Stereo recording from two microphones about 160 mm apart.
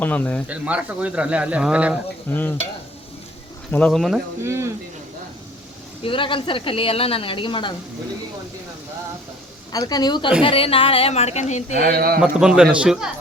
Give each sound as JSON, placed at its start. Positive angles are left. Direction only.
{"t": 0.0, "sound": "speech", "side_deg": 10}
{"t": 0.4, "sound": "speech", "side_deg": -10}
{"t": 2.3, "sound": "speech", "side_deg": 10}
{"t": 3.7, "sound": "speech", "side_deg": 5}
{"t": 4.4, "sound": "speech", "side_deg": -15}
{"t": 6.0, "sound": "a woman's voice", "side_deg": 35}
{"t": 9.7, "sound": "a woman's voice", "side_deg": 25}
{"t": 11.8, "sound": "speech", "side_deg": -70}
{"t": 12.2, "sound": "speech", "side_deg": -5}